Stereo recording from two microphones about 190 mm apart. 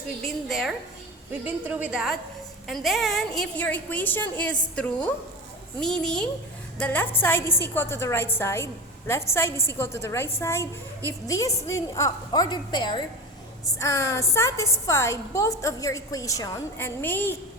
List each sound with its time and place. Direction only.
0.3 s a woman's voice: centre (ahead or behind)